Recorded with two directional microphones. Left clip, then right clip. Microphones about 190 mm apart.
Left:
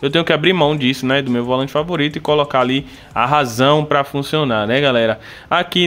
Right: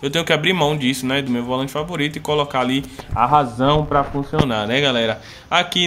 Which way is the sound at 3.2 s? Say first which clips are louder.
Left 1 dB; 45° left (ahead or behind).